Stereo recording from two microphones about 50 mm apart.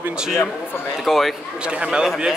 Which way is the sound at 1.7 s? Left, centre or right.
Centre.